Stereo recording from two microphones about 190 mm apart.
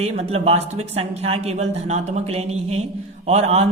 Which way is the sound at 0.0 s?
35° right (ahead or behind).